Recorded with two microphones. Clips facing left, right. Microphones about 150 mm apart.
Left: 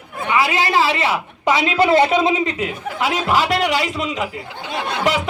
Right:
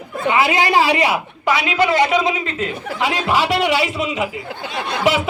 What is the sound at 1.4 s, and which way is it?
A woman's voice, 25° left (ahead or behind).